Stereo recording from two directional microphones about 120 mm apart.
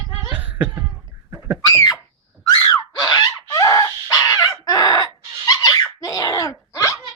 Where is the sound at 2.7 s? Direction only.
35° left (ahead or behind).